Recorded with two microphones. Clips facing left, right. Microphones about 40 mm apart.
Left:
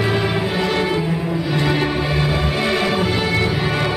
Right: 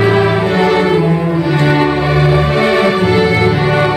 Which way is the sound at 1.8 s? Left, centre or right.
Centre.